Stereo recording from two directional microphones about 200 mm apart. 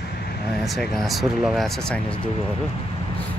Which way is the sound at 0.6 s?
Centre (ahead or behind).